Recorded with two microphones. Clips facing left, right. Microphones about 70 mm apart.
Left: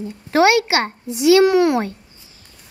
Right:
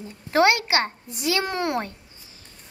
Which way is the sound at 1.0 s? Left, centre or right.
Left.